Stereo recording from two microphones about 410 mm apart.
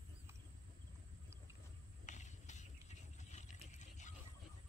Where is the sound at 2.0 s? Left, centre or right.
Centre.